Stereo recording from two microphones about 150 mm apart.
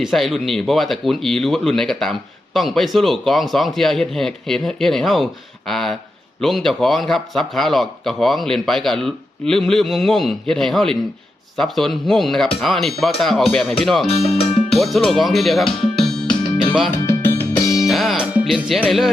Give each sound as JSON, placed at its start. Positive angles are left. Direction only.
{"t": 0.0, "sound": "speech", "side_deg": 0}
{"t": 16.0, "sound": "music", "side_deg": 5}
{"t": 17.1, "sound": "music", "side_deg": 15}
{"t": 17.7, "sound": "music", "side_deg": 0}
{"t": 18.3, "sound": "speech", "side_deg": -5}